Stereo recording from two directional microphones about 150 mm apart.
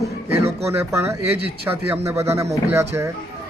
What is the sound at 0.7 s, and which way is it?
A man's voice, 15° right (ahead or behind).